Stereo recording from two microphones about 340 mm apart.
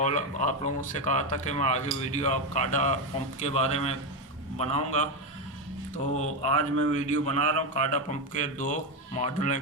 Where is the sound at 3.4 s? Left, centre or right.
Centre.